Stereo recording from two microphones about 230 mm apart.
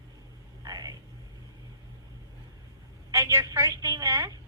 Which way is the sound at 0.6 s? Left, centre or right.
Centre.